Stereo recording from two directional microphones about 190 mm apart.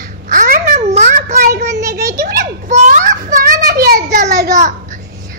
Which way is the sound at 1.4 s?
55° right (ahead or behind).